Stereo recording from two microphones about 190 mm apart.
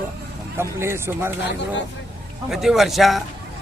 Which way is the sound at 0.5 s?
15° right (ahead or behind).